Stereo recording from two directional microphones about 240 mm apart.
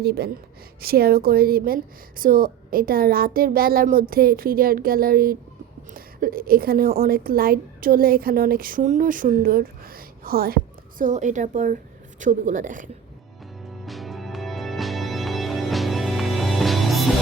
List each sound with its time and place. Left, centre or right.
0.0 s a woman's voice: right
13.8 s music: centre